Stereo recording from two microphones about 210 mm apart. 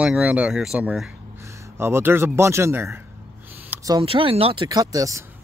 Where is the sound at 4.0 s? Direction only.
25° right (ahead or behind).